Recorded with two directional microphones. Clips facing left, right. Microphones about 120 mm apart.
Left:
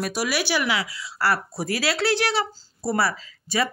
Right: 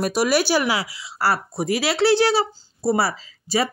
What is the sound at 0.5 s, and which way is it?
A woman's voice, 35° right (ahead or behind).